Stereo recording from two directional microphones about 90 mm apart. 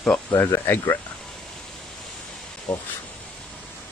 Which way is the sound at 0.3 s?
35° left (ahead or behind).